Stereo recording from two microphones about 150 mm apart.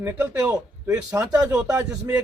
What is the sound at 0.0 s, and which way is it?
Speech, 15° right (ahead or behind).